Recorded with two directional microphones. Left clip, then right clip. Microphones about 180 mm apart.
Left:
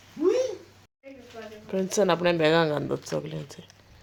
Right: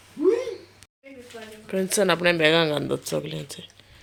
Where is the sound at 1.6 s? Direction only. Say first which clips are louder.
Right 2 dB; centre (ahead or behind).